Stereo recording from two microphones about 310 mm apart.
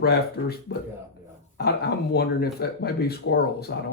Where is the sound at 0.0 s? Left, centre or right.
Left.